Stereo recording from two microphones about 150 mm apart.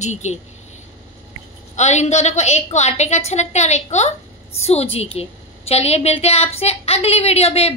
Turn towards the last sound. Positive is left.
turn(degrees=45)  # may be behind; listen again after turning